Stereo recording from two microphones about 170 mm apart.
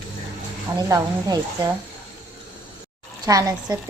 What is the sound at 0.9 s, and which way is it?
Speech, 20° right (ahead or behind).